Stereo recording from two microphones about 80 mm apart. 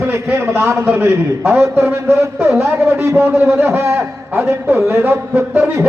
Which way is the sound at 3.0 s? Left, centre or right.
Right.